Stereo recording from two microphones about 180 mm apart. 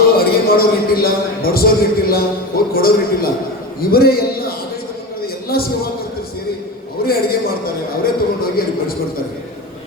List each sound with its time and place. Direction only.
0.2 s a man's voice: 55° left (ahead or behind)
5.2 s a sound: 55° left (ahead or behind)
7.0 s a man's voice: 55° left (ahead or behind)